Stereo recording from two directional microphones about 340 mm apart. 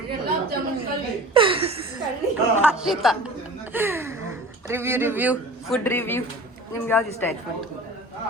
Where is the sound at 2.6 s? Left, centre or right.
Centre.